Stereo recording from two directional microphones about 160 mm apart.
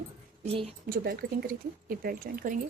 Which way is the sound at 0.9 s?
75° right (ahead or behind).